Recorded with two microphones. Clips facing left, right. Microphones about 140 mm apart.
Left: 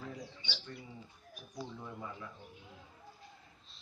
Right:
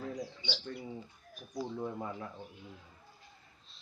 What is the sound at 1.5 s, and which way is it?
Speech, 45° right (ahead or behind).